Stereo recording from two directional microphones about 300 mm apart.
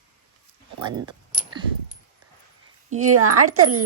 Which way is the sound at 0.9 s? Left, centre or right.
Centre.